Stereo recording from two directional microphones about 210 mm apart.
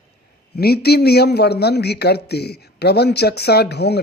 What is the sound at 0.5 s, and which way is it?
Speech, 50° left (ahead or behind).